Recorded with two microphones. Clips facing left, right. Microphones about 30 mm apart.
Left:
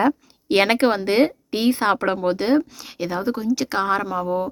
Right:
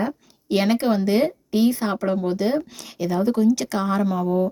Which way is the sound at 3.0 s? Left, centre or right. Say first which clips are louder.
Right 2 dB; left.